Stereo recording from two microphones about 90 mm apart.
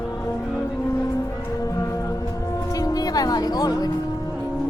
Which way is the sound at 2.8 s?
45° left (ahead or behind).